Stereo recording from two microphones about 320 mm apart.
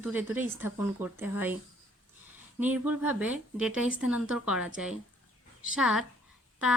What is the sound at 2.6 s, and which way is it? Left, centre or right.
A woman's voice, centre.